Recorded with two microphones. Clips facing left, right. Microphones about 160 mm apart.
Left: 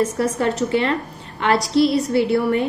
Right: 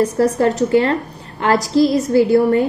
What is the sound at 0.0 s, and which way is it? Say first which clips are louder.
A woman's voice: right 5 dB; 35° right (ahead or behind).